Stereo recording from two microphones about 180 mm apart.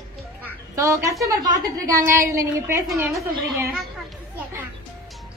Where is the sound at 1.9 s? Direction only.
15° right (ahead or behind).